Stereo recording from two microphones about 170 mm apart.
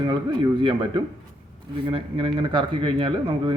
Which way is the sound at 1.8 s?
30° right (ahead or behind).